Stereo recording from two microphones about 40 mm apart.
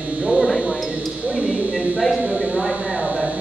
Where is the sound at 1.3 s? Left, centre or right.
Right.